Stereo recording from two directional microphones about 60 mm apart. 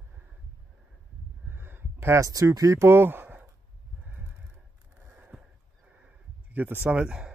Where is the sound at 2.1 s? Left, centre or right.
Right.